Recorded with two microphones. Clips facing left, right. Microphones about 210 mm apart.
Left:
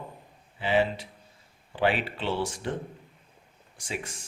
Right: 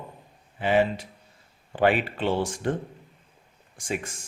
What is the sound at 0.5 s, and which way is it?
Speech, 50° right (ahead or behind).